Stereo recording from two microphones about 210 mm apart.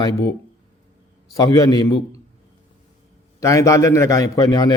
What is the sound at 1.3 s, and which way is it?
Speech, 15° left (ahead or behind).